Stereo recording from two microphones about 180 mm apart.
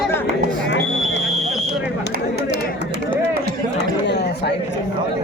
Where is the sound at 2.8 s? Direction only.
65° right (ahead or behind).